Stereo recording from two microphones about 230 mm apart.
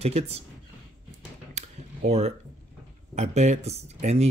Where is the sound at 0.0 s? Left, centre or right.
Right.